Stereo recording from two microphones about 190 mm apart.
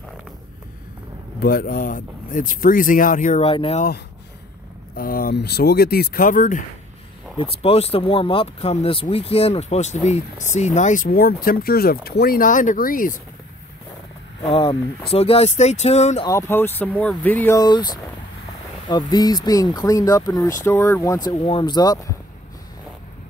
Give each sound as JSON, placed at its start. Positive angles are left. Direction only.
{"t": 1.4, "sound": "speech", "side_deg": 50}
{"t": 4.9, "sound": "speech", "side_deg": 50}
{"t": 7.3, "sound": "speech", "side_deg": 30}
{"t": 14.4, "sound": "speech", "side_deg": 25}
{"t": 16.3, "sound": "speech", "side_deg": 15}